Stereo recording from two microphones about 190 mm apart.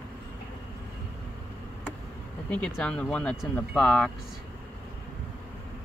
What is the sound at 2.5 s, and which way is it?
Speech, 5° left (ahead or behind).